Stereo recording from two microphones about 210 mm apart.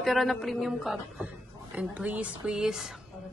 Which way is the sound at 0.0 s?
Centre (ahead or behind).